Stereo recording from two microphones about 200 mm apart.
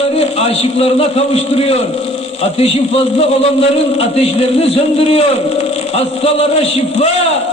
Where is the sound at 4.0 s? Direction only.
30° left (ahead or behind).